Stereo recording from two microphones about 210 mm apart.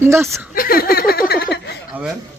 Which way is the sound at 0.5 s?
45° left (ahead or behind).